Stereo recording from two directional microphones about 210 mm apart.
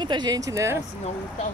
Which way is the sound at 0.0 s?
20° right (ahead or behind).